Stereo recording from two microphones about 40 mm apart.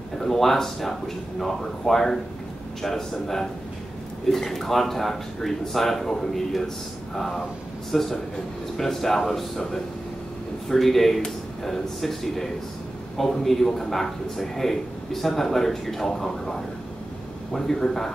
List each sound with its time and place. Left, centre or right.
0.2 s speech: centre